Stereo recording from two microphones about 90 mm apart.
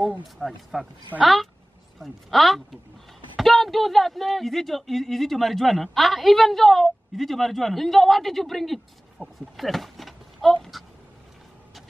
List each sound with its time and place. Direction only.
0.4 s speech: 5° right (ahead or behind)
9.2 s speech: 15° left (ahead or behind)
9.6 s a sound: centre (ahead or behind)